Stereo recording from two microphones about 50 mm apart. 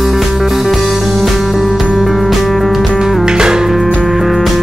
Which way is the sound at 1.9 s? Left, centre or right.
Centre.